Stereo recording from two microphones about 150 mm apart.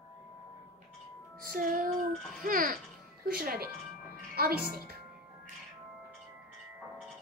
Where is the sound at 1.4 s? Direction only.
70° right (ahead or behind).